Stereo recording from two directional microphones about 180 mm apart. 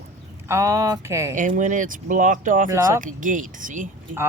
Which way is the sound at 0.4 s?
15° right (ahead or behind).